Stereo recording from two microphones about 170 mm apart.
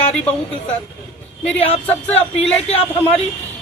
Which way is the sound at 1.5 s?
35° left (ahead or behind).